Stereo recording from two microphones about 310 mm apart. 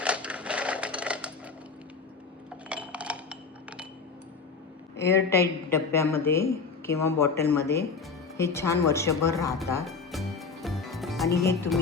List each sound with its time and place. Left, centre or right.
0.0 s sewing machine: centre
2.6 s chink: centre
4.9 s speech: centre
9.6 s music: centre
11.4 s speech: centre